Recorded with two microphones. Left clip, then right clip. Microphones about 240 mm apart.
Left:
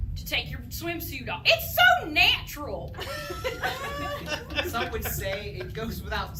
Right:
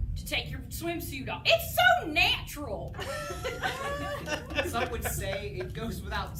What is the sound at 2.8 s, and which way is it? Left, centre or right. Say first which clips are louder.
Speech: left 1 dB; right.